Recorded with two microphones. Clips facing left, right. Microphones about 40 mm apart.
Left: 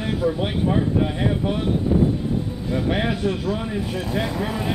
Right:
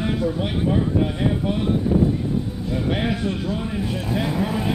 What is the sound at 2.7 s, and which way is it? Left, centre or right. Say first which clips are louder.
Speech: left 1 dB; centre.